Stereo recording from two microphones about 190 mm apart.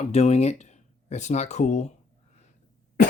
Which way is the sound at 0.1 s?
35° left (ahead or behind).